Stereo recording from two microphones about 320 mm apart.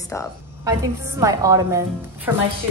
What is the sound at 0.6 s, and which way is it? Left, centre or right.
A woman's voice, centre.